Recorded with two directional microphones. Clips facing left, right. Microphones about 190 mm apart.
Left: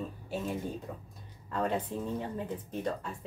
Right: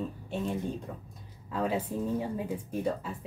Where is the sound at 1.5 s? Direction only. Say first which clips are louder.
Right 1 dB; 5° right (ahead or behind).